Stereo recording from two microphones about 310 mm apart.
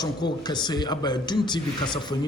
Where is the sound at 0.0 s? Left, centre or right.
Centre.